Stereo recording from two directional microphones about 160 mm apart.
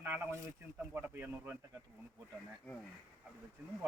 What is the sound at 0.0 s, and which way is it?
A man's voice, 15° right (ahead or behind).